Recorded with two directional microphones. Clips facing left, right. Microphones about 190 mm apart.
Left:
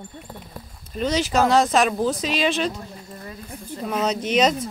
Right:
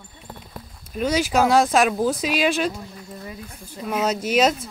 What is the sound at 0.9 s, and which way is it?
Speech, 10° right (ahead or behind).